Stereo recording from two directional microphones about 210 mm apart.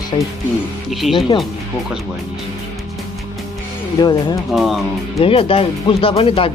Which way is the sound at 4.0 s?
20° left (ahead or behind).